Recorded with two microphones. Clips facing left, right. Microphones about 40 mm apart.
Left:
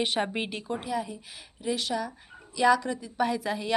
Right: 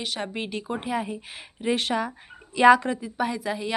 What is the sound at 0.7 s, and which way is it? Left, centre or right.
Speech, right.